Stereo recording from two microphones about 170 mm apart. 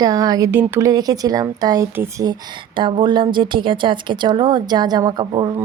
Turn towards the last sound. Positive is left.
turn(degrees=-25)  # may be behind; listen again after turning